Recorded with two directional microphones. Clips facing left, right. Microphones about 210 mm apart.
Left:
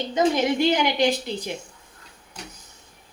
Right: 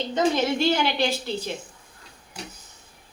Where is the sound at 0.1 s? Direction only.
15° left (ahead or behind).